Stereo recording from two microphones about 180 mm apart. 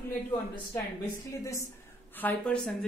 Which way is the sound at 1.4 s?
15° left (ahead or behind).